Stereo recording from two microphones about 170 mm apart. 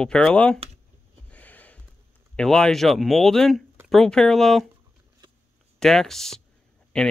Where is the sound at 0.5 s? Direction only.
35° right (ahead or behind).